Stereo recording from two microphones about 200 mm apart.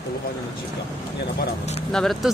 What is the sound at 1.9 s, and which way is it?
Speech, centre (ahead or behind).